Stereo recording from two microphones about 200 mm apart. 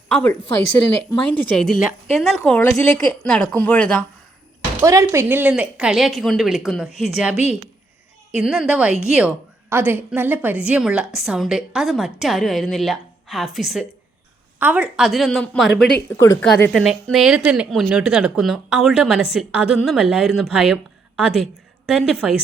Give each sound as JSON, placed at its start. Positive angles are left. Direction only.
{"t": 0.1, "sound": "a woman's voice", "side_deg": 5}
{"t": 4.8, "sound": "a woman's voice", "side_deg": -15}
{"t": 7.3, "sound": "a woman's voice", "side_deg": 30}
{"t": 8.4, "sound": "a woman's voice", "side_deg": 0}
{"t": 16.8, "sound": "a woman's voice", "side_deg": 0}